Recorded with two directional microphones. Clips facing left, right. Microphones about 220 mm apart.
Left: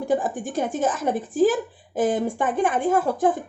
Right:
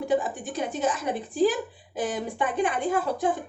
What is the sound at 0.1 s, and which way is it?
Speech, 45° left (ahead or behind).